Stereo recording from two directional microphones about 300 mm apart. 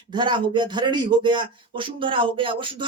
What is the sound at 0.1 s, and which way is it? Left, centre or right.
Speech, centre.